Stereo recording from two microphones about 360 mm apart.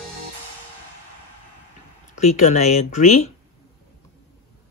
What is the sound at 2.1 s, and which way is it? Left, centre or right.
Speech, centre.